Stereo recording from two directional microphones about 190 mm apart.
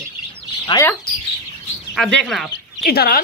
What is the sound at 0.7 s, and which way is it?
Speech, 25° left (ahead or behind).